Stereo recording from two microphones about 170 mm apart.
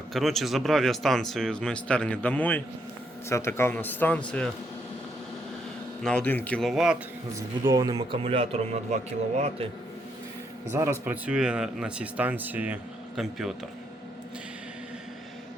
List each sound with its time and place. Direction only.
0.1 s speech: centre (ahead or behind)
6.0 s speech: 5° left (ahead or behind)
7.3 s speech: 20° right (ahead or behind); by 9.0 s 40° right (ahead or behind)
10.7 s speech: 15° right (ahead or behind)